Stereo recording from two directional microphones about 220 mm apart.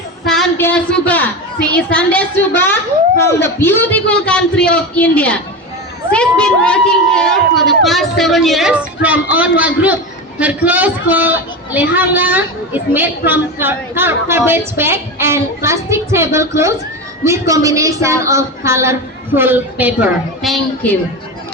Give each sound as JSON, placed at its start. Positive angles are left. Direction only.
{"t": 0.3, "sound": "a child's voice", "side_deg": 5}